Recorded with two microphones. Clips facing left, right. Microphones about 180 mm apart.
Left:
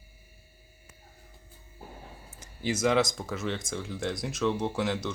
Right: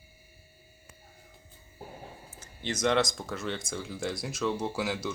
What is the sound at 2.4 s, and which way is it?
Speech, 5° left (ahead or behind).